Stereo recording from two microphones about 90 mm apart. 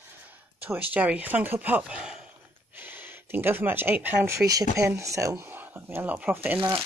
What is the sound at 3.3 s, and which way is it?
Speech, 25° right (ahead or behind).